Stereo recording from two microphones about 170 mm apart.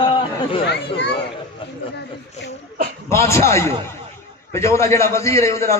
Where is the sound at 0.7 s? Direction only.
90° left.